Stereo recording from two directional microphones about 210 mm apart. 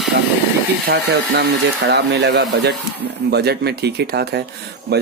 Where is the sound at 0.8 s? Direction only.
55° right (ahead or behind).